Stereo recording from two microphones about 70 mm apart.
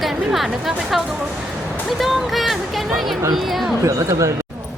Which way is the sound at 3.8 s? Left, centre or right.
Right.